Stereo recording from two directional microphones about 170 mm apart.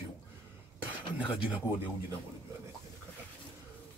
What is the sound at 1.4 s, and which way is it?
Speech, 10° right (ahead or behind).